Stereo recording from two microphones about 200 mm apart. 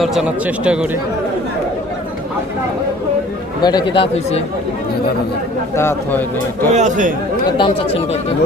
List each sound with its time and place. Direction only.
0.0 s speech: centre (ahead or behind)
3.6 s speech: 20° left (ahead or behind)
5.7 s a man's voice: 10° left (ahead or behind)
6.7 s speech: 40° right (ahead or behind)
7.5 s speech: 25° left (ahead or behind)